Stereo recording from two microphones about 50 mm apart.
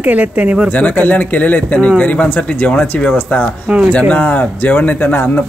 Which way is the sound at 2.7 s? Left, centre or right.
Centre.